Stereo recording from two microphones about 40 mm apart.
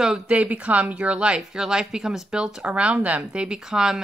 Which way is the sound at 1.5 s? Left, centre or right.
Centre.